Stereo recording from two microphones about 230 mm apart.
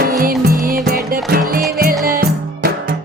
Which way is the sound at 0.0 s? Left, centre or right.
Right.